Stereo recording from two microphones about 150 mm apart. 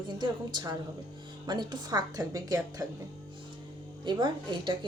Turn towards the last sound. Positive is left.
turn(degrees=-30)  # may be behind; listen again after turning